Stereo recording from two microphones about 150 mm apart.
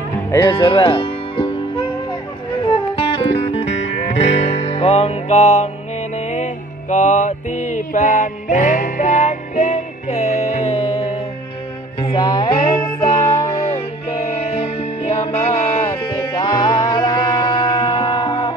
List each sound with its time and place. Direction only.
0.3 s music: 25° left (ahead or behind); by 5.7 s 50° left (ahead or behind)
6.1 s mantra: 50° left (ahead or behind)
12.0 s music: 35° left (ahead or behind)
14.2 s music: 45° left (ahead or behind)